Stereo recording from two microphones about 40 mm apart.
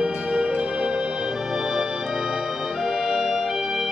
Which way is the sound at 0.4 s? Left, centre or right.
Right.